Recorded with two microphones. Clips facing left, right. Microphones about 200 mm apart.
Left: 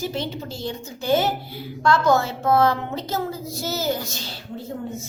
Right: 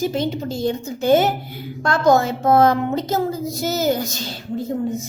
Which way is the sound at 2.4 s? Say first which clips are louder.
Right 5 dB; 45° right (ahead or behind).